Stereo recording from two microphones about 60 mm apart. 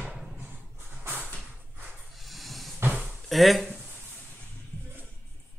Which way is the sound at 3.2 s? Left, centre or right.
Centre.